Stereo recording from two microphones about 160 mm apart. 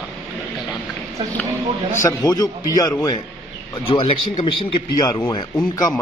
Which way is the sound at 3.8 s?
30° left (ahead or behind).